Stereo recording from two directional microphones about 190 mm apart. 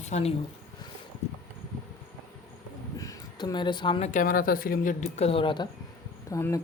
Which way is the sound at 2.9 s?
20° left (ahead or behind).